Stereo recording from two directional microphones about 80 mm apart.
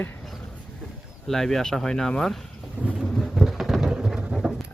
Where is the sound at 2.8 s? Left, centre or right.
Right.